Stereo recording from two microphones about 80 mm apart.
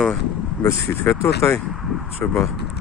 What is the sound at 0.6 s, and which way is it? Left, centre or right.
Speech, left.